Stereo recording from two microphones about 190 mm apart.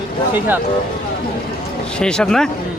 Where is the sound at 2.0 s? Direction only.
5° left (ahead or behind).